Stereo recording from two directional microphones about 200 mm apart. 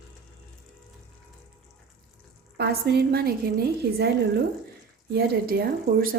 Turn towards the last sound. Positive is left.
turn(degrees=-50)  # may be behind; listen again after turning